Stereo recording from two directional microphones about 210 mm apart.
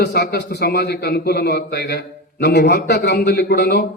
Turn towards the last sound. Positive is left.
turn(degrees=50)  # may be behind; listen again after turning